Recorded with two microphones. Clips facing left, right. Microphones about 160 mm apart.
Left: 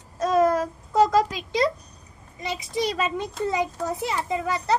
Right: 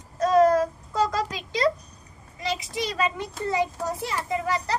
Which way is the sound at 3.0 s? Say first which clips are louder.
Left 2 dB; 20° left (ahead or behind).